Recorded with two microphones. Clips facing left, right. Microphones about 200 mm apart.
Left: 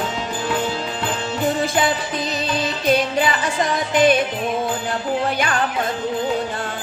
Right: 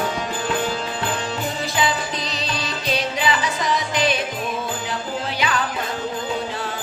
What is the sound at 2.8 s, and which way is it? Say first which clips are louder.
Music: left 4 dB; 50° left (ahead or behind).